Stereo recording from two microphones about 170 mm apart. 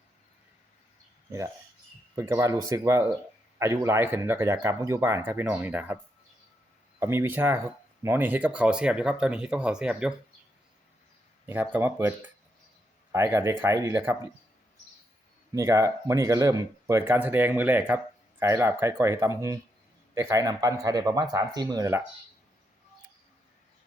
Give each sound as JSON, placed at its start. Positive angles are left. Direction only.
{"t": 2.1, "sound": "speech", "side_deg": -15}
{"t": 7.0, "sound": "speech", "side_deg": -15}
{"t": 11.4, "sound": "speech", "side_deg": -10}
{"t": 15.5, "sound": "speech", "side_deg": -20}